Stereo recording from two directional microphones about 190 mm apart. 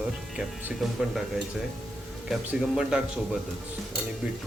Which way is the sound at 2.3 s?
5° right (ahead or behind).